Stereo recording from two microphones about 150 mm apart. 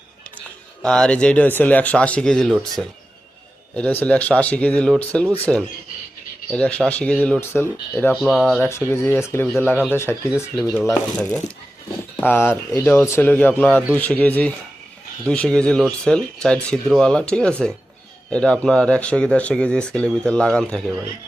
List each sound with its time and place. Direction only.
0.8 s speech: 5° left (ahead or behind)
6.5 s speech: 10° left (ahead or behind)
8.1 s speech: centre (ahead or behind)
8.9 s speech: 15° left (ahead or behind)